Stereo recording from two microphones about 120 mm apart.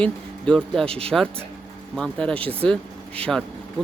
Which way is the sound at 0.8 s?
55° right (ahead or behind).